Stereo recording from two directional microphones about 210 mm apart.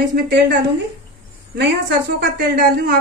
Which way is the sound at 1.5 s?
50° right (ahead or behind).